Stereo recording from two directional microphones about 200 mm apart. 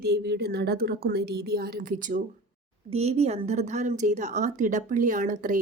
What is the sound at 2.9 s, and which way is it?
Speech, 30° right (ahead or behind).